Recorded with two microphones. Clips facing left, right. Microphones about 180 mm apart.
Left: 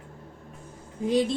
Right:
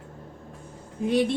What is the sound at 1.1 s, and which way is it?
Speech, 65° right (ahead or behind).